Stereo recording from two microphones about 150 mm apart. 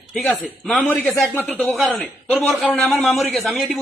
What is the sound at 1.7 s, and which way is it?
A man's voice, centre (ahead or behind).